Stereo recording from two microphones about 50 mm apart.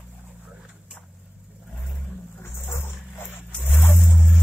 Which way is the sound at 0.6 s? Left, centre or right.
Centre.